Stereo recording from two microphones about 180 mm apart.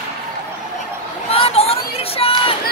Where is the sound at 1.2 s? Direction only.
35° left (ahead or behind).